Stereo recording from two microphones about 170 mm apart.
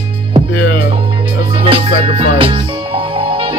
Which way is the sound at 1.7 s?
30° right (ahead or behind).